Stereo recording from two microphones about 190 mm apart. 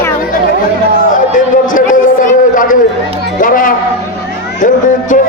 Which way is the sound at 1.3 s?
45° left (ahead or behind).